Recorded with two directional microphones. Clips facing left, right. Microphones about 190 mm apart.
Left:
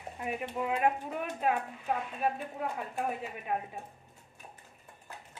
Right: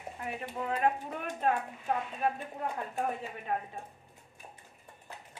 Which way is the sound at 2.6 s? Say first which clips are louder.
Right 2 dB; 10° left (ahead or behind).